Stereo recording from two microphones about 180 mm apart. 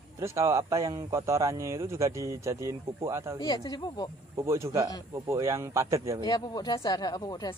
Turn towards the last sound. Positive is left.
turn(degrees=20)  # may be behind; listen again after turning